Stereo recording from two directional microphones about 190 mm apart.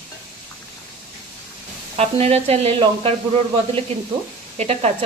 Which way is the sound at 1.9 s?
35° right (ahead or behind).